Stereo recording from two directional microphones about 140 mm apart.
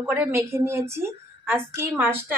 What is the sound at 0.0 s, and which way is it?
A woman's voice, 15° right (ahead or behind).